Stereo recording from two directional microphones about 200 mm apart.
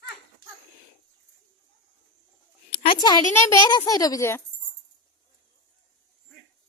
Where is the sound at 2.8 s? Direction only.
25° left (ahead or behind).